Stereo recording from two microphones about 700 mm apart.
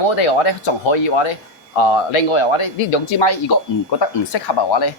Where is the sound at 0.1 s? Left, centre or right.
Left.